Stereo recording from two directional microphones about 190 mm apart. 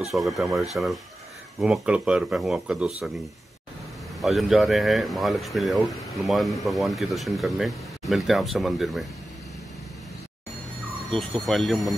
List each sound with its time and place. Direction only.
0.1 s speech: centre (ahead or behind)
4.2 s speech: centre (ahead or behind)
11.1 s speech: centre (ahead or behind)